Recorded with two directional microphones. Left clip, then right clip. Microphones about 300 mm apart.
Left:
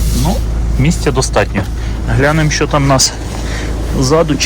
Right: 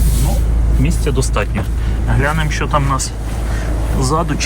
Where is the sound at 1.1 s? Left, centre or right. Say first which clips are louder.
Left 8 dB; centre.